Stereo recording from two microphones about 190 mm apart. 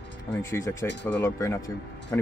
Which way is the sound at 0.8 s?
70° left (ahead or behind).